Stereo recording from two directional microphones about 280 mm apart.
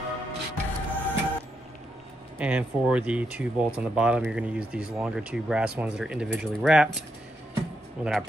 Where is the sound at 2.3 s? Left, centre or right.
Centre.